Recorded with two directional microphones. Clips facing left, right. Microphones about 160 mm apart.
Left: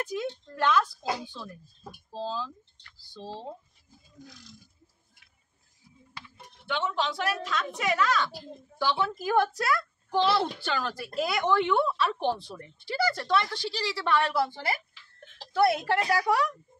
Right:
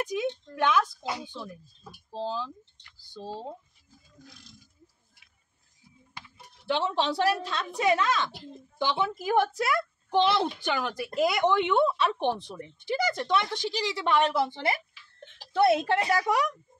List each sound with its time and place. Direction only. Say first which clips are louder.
0.0 s a woman's voice: right 3 dB; 15° right (ahead or behind)
6.7 s speech: right 3 dB; 30° right (ahead or behind)